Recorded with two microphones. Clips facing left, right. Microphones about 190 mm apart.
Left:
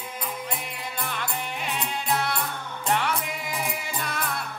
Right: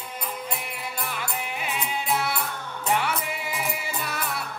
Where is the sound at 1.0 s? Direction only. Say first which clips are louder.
Left 1 dB; 5° right (ahead or behind).